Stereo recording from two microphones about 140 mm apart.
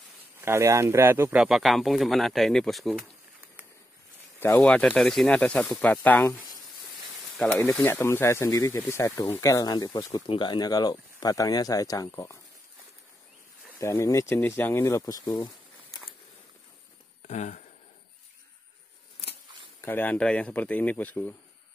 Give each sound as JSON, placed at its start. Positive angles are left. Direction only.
{"t": 0.4, "sound": "speech", "side_deg": -20}
{"t": 1.3, "sound": "speech", "side_deg": -5}
{"t": 4.5, "sound": "speech", "side_deg": 5}
{"t": 7.6, "sound": "speech", "side_deg": 15}
{"t": 13.7, "sound": "speech", "side_deg": 20}
{"t": 17.3, "sound": "speech", "side_deg": 55}
{"t": 19.8, "sound": "speech", "side_deg": 15}